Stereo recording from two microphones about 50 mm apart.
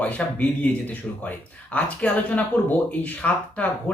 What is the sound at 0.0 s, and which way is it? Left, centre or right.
A woman's voice, left.